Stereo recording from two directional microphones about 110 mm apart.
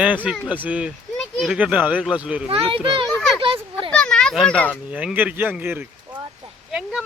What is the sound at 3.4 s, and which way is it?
Children playing, 50° right (ahead or behind).